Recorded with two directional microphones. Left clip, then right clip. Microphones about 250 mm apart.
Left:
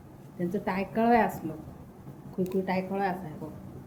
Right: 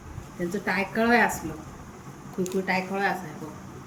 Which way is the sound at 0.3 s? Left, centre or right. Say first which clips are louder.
Right 4 dB; centre.